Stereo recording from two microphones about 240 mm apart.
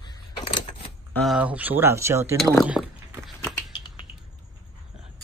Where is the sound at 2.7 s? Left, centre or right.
Centre.